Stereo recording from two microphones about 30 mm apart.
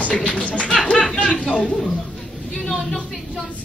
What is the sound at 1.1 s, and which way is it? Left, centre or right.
Speech, left.